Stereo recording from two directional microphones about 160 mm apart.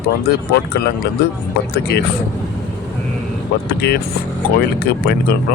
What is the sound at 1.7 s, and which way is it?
Speech, 90° left.